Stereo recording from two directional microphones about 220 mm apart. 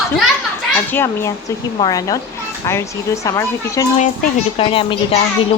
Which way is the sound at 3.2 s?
15° left (ahead or behind).